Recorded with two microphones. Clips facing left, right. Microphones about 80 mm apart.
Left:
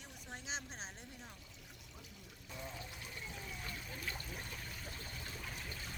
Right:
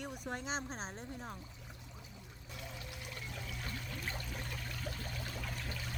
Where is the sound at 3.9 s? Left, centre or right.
Right.